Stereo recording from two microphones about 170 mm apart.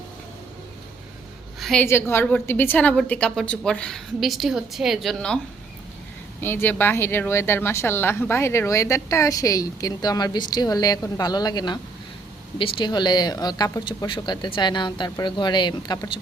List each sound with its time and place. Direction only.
1.5 s a sound: centre (ahead or behind)
1.8 s a woman's voice: 15° left (ahead or behind)
6.4 s speech: 15° left (ahead or behind)